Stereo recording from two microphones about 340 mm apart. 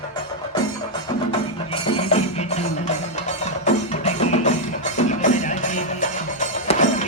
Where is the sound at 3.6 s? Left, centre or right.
Centre.